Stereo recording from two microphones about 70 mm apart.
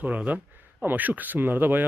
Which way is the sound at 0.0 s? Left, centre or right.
Right.